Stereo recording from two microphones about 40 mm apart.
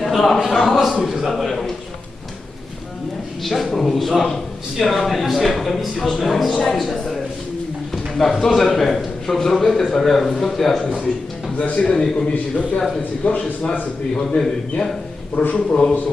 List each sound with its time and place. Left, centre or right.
0.2 s a man's voice: centre
0.5 s speech: centre
3.4 s speech: centre
6.0 s a man's voice: centre
6.2 s speech: centre
8.2 s a man's voice: centre
11.5 s a man's voice: left
14.2 s a man's voice: centre